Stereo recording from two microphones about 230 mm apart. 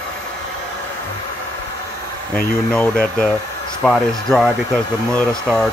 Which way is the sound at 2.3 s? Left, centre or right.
Centre.